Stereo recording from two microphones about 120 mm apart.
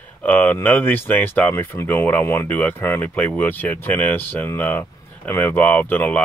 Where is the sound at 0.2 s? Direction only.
15° left (ahead or behind).